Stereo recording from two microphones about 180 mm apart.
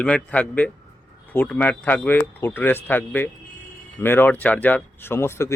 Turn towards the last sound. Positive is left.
turn(degrees=15)  # may be behind; listen again after turning